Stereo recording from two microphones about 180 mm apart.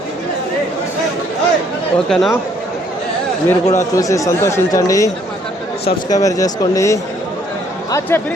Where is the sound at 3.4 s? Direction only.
15° left (ahead or behind).